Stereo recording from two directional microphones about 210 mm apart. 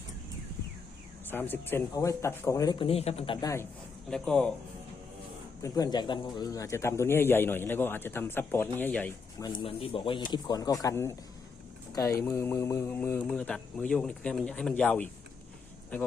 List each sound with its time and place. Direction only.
1.3 s speech: 10° left (ahead or behind); by 3.3 s 30° left (ahead or behind)
3.4 s speech: 15° left (ahead or behind)
5.6 s speech: 15° left (ahead or behind)
9.5 s speech: 25° left (ahead or behind); by 16.1 s 10° left (ahead or behind)